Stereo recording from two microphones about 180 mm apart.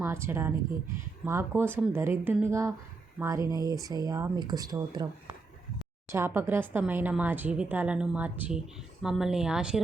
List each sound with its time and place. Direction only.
0.0 s speech: 15° right (ahead or behind)